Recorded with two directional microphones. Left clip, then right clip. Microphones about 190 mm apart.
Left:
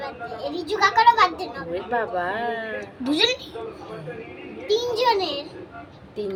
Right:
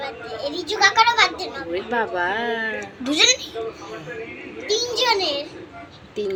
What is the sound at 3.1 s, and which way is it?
Speech, 15° left (ahead or behind).